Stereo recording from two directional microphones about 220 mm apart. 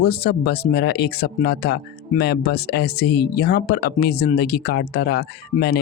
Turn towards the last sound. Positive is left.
turn(degrees=45)  # may be behind; listen again after turning